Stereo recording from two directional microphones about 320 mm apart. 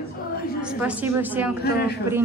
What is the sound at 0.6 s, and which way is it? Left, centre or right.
Speech, centre.